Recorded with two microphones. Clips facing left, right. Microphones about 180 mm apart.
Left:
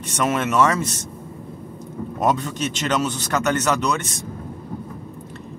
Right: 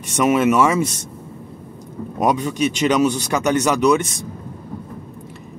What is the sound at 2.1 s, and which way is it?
Speech, 10° right (ahead or behind).